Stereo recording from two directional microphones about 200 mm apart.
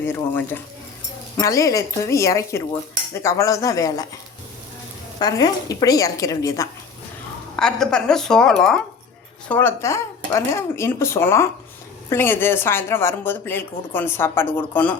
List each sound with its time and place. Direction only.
0.0 s speech: 10° left (ahead or behind)
5.2 s speech: 20° left (ahead or behind)
7.5 s a woman's voice: 5° left (ahead or behind)